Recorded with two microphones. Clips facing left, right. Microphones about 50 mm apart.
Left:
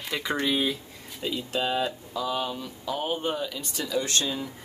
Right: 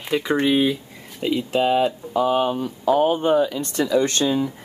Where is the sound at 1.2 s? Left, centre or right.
Right.